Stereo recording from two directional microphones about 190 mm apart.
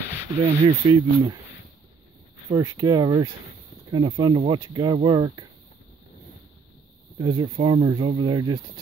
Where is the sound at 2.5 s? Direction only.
20° right (ahead or behind).